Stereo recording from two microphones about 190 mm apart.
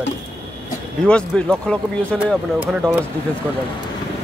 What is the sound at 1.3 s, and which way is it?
Speech, 5° left (ahead or behind).